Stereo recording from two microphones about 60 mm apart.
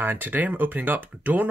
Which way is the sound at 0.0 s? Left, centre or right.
Right.